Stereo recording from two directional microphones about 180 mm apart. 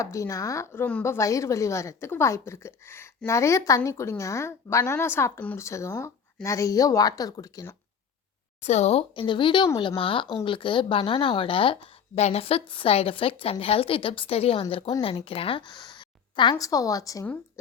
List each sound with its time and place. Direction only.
0.0 s a woman's voice: 15° left (ahead or behind)
8.6 s a woman's voice: 35° left (ahead or behind); by 17.3 s 20° left (ahead or behind)